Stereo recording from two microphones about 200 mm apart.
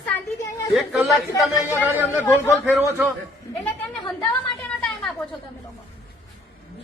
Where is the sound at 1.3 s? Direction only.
10° left (ahead or behind).